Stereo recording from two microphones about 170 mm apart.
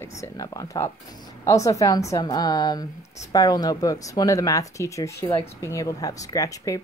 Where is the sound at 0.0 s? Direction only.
20° left (ahead or behind).